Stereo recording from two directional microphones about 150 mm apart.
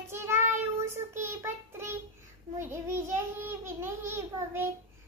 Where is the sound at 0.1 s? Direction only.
15° right (ahead or behind).